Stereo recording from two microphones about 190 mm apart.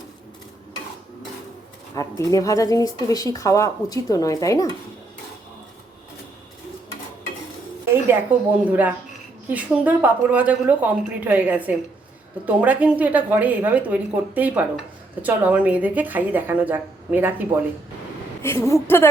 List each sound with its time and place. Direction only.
2.0 s speech: 15° left (ahead or behind)
8.3 s a woman's voice: 10° right (ahead or behind)
18.4 s speech: 15° left (ahead or behind)